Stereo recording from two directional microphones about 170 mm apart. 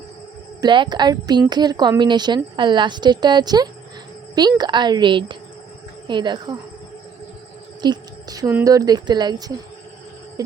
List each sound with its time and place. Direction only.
0.6 s speech: 25° right (ahead or behind)
7.8 s a sound: 25° right (ahead or behind)
8.6 s speech: 20° right (ahead or behind)